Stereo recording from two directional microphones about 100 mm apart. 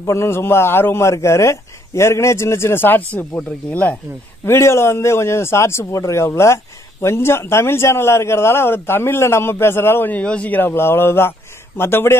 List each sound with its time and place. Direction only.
0.0 s a man's voice: 30° left (ahead or behind)
4.5 s a man's voice: 25° left (ahead or behind)